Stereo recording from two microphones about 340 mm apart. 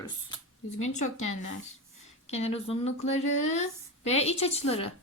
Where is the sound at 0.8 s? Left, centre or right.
Left.